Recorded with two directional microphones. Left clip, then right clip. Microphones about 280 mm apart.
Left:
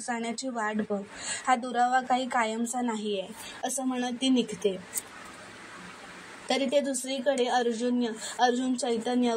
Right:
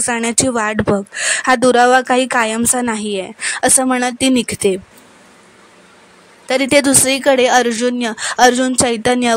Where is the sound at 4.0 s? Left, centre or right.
Right.